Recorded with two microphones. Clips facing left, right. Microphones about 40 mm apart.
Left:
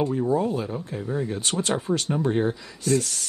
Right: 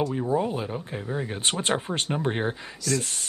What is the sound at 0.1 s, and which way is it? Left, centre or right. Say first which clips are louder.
Speech: left 2 dB; centre.